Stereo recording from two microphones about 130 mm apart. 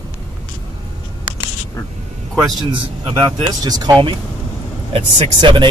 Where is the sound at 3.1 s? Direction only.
30° right (ahead or behind).